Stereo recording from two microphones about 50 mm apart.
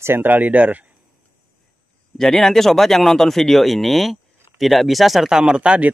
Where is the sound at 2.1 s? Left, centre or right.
Centre.